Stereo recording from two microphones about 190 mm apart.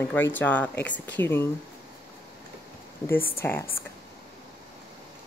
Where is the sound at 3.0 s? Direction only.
10° left (ahead or behind).